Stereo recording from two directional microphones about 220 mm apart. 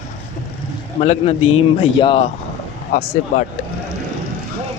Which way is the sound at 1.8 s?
25° left (ahead or behind).